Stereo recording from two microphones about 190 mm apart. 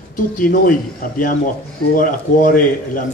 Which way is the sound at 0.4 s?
45° left (ahead or behind).